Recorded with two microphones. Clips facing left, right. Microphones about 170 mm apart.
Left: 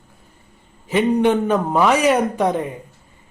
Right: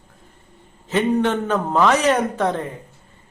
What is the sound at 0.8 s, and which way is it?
A man's voice, 15° left (ahead or behind).